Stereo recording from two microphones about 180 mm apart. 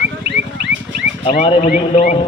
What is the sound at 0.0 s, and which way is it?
Bird, 80° right.